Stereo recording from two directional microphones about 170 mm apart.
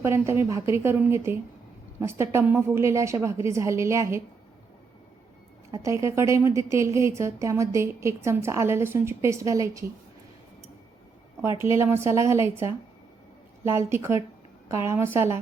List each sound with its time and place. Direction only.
0.0 s a woman's voice: 15° right (ahead or behind)
5.7 s a woman's voice: 20° right (ahead or behind)
11.4 s a woman's voice: 15° right (ahead or behind)